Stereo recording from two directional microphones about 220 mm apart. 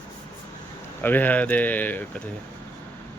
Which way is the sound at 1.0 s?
10° left (ahead or behind).